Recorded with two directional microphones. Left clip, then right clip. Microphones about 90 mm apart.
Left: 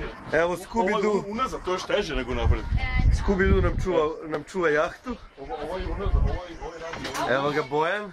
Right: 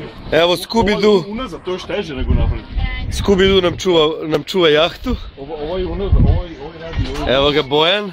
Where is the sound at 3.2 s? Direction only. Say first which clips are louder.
Right 11 dB; 20° right (ahead or behind).